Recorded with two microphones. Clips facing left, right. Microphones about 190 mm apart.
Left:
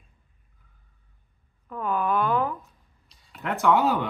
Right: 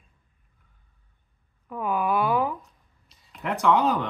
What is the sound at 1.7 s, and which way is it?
Speech, 10° right (ahead or behind).